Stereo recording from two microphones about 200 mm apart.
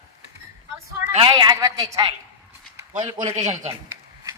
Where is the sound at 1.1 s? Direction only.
25° right (ahead or behind).